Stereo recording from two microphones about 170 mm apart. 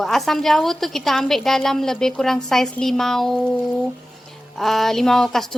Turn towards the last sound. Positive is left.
turn(degrees=0)  # may be behind; listen again after turning